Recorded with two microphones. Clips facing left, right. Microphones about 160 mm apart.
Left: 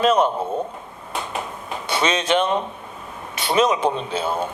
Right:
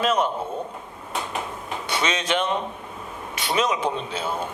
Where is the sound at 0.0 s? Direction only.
30° left (ahead or behind).